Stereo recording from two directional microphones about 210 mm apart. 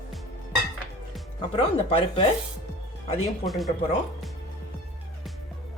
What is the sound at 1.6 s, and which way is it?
Speech, 25° left (ahead or behind).